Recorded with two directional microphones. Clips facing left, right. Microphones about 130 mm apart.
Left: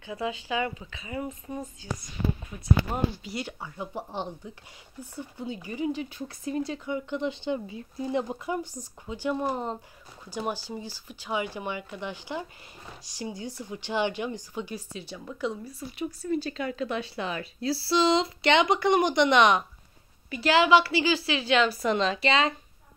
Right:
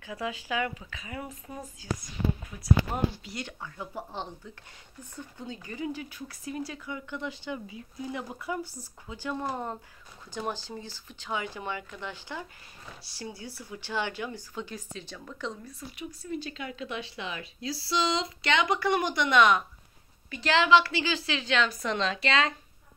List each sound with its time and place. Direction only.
0.7 s speech: 5° left (ahead or behind)
3.3 s speech: 5° left (ahead or behind)
3.7 s speech: 15° left (ahead or behind)
16.0 s speech: 35° left (ahead or behind)
20.2 s speech: 10° left (ahead or behind)